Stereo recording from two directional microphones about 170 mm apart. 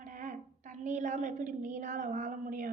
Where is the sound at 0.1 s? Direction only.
50° right (ahead or behind).